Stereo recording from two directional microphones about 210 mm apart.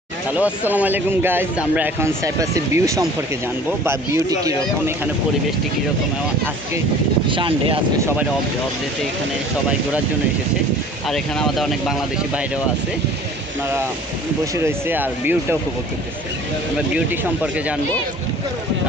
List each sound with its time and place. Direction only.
0.3 s speech: 5° right (ahead or behind)
7.3 s speech: 25° right (ahead or behind)
11.1 s speech: centre (ahead or behind)
14.5 s speech: 10° right (ahead or behind)
16.7 s speech: 5° right (ahead or behind)